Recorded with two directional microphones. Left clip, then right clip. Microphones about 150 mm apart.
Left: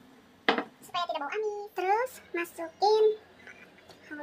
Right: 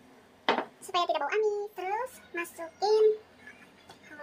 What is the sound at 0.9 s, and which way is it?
Hands, 35° right (ahead or behind).